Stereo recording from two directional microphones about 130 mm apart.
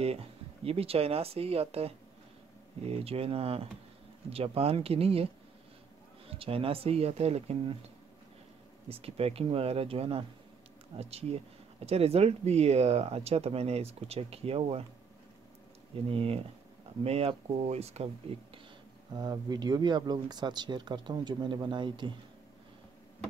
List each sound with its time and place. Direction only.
0.7 s speech: 50° right (ahead or behind)
8.8 s speech: 50° right (ahead or behind)
16.1 s speech: 45° right (ahead or behind)
19.1 s speech: 30° right (ahead or behind)